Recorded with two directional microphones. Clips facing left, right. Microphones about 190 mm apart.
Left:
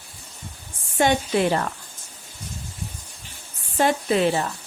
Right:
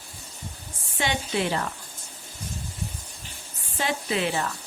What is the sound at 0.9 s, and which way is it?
Speech, 50° left (ahead or behind).